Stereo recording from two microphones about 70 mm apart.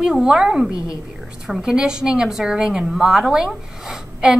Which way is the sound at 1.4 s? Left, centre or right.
Centre.